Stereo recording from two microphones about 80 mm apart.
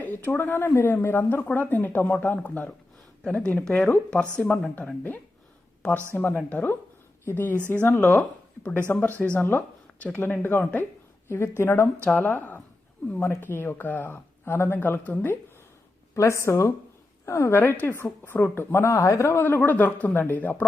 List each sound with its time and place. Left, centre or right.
0.0 s speech: left; by 4.7 s centre
4.7 s speech: centre
6.3 s speech: centre
11.3 s speech: left
16.1 s a woman's voice: left
17.5 s speech: left
19.4 s speech: left